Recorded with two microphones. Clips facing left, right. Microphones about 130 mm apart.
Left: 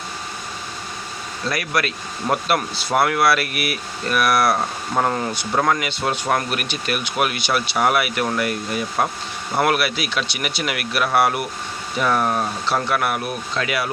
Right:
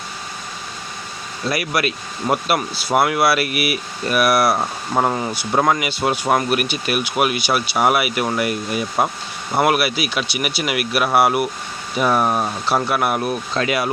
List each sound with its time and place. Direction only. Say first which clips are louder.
1.5 s speech: right 2 dB; 10° right (ahead or behind); by 13.9 s 25° right (ahead or behind)